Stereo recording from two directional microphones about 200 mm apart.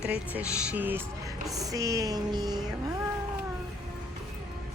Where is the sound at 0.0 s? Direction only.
5° right (ahead or behind).